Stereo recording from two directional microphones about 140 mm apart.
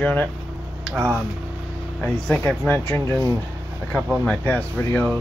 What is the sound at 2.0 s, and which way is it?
Speech, 10° left (ahead or behind).